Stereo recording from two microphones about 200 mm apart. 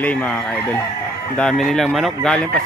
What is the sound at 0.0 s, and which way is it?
Speech, 5° left (ahead or behind).